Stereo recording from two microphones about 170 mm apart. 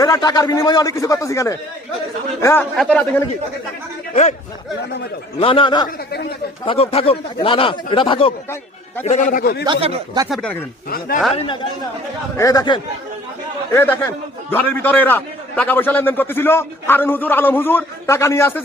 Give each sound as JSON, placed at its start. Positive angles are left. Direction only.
{"t": 0.0, "sound": "a man's voice", "side_deg": 20}
{"t": 2.7, "sound": "speech", "side_deg": 5}
{"t": 4.1, "sound": "speech", "side_deg": 40}
{"t": 5.4, "sound": "a man's voice", "side_deg": 30}
{"t": 9.0, "sound": "a man's voice", "side_deg": 50}
{"t": 9.6, "sound": "speech", "side_deg": -35}
{"t": 10.2, "sound": "speech", "side_deg": 0}
{"t": 10.8, "sound": "a man's voice", "side_deg": 60}
{"t": 11.3, "sound": "a man's voice", "side_deg": 30}
{"t": 13.7, "sound": "a man's voice", "side_deg": 10}